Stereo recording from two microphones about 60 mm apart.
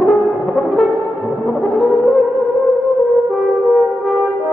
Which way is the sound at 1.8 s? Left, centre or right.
Centre.